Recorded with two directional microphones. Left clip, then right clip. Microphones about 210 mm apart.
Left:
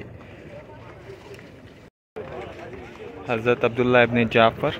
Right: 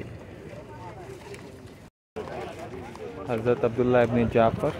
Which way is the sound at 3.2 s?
5° left (ahead or behind).